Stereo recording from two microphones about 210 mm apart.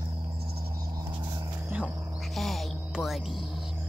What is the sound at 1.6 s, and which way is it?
Music, 5° right (ahead or behind).